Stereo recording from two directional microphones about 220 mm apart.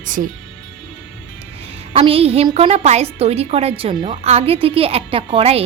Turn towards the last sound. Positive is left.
turn(degrees=-25)  # may be behind; listen again after turning